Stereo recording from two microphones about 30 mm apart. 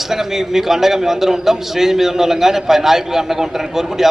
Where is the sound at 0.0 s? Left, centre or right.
Centre.